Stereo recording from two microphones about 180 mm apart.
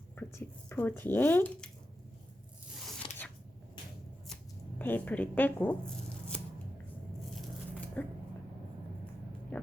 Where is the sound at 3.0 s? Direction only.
30° left (ahead or behind).